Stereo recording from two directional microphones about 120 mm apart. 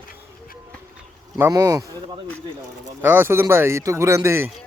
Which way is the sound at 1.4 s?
30° right (ahead or behind).